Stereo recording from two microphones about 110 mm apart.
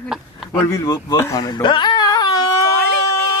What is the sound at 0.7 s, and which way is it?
Speech, 35° left (ahead or behind).